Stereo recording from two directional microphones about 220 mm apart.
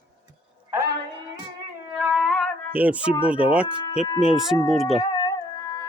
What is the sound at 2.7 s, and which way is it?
Speech, 5° right (ahead or behind).